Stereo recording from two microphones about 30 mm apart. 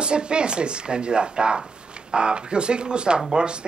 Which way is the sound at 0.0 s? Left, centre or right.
Right.